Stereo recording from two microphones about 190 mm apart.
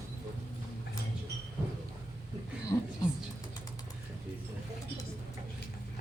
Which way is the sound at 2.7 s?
15° left (ahead or behind).